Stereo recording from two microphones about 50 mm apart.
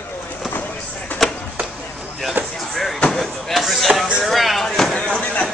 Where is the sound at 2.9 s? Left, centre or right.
Left.